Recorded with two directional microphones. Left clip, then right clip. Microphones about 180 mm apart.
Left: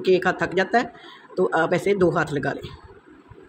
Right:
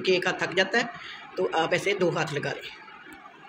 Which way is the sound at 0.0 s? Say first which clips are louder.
Left 5 dB; 65° left (ahead or behind).